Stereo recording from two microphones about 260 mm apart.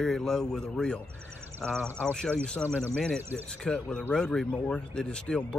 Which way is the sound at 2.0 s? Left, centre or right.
Centre.